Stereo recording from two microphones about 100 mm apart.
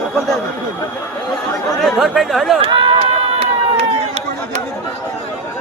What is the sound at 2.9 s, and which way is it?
Run, 90° right.